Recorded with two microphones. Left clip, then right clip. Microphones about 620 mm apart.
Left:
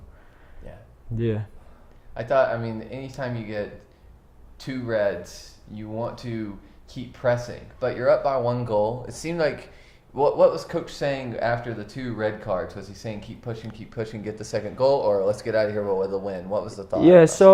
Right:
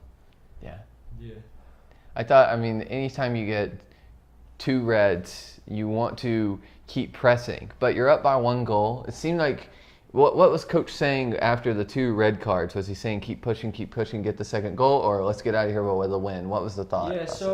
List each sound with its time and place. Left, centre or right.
2.1 s speech: right
17.4 s speech: left